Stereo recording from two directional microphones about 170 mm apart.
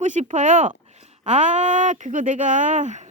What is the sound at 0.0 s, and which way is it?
Speech, 45° right (ahead or behind).